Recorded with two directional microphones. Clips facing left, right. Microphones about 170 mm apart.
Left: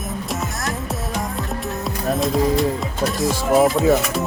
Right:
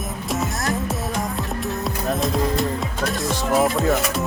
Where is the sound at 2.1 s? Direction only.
Centre (ahead or behind).